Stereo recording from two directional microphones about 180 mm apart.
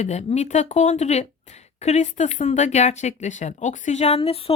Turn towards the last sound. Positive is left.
turn(degrees=35)  # may be behind; listen again after turning